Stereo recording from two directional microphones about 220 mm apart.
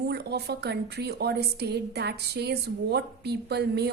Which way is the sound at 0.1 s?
50° right (ahead or behind).